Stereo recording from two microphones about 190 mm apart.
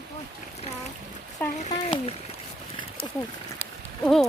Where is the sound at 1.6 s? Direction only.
35° left (ahead or behind).